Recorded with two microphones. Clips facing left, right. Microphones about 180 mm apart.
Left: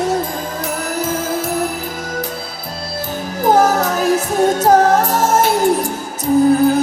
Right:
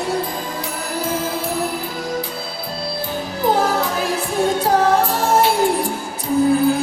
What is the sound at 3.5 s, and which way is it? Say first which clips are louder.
Music: left 6 dB; 45° left (ahead or behind).